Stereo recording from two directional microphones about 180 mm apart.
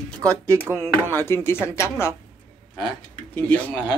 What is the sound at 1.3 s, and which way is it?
Speech, 15° left (ahead or behind).